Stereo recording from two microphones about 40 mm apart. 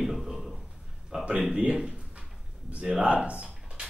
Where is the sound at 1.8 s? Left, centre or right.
Centre.